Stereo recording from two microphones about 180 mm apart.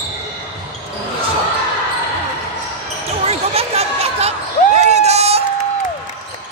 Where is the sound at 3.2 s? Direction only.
35° right (ahead or behind).